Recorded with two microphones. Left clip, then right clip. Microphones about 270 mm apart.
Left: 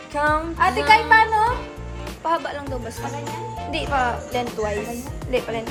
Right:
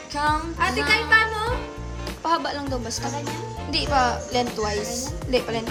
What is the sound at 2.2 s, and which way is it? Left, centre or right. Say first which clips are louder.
Speech: even; centre.